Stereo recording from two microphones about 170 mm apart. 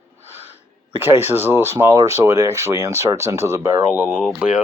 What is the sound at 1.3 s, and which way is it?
Speech, 15° right (ahead or behind).